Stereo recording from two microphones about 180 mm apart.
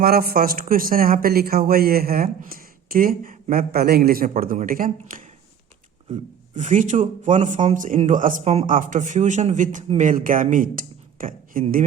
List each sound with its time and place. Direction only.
0.0 s speech: 55° right (ahead or behind)
6.5 s speech: 45° right (ahead or behind)